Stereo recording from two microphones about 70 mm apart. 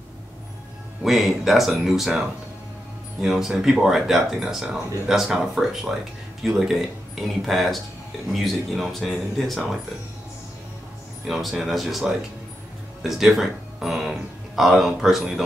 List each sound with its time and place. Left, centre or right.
1.0 s speech: centre
11.2 s speech: centre
13.0 s speech: centre